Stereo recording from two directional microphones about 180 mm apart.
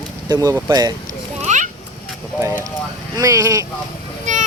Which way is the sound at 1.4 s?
40° right (ahead or behind).